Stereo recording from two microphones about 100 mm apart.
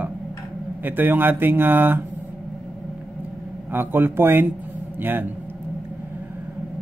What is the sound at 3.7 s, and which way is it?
Speech, 20° right (ahead or behind).